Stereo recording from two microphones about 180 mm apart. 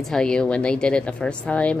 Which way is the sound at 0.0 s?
5° left (ahead or behind).